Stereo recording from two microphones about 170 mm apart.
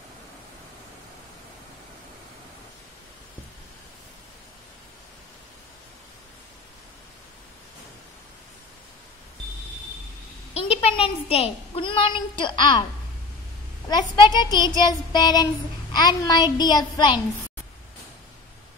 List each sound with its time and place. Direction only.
10.5 s a woman's voice: 35° left (ahead or behind)
13.8 s speech: 25° left (ahead or behind)